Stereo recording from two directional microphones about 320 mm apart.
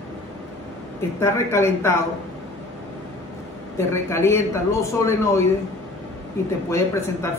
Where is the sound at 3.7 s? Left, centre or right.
Centre.